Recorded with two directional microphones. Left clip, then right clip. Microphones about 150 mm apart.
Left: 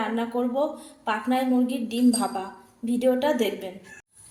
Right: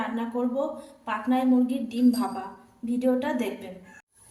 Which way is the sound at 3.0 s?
35° left (ahead or behind).